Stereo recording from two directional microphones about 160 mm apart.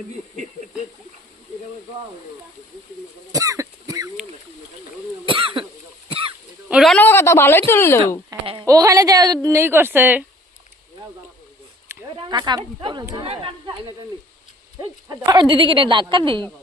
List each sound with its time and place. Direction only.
3.3 s cough: 20° right (ahead or behind)
5.2 s speech: 30° right (ahead or behind)
6.7 s speech: 5° right (ahead or behind)
6.9 s a woman's voice: 15° left (ahead or behind)
8.6 s a woman's voice: 20° right (ahead or behind)
12.0 s speech: 30° right (ahead or behind)